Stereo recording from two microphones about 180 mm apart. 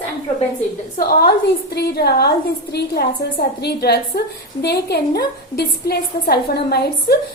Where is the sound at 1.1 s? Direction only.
60° left (ahead or behind).